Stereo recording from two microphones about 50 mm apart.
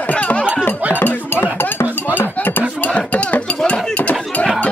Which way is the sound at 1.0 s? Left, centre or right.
Left.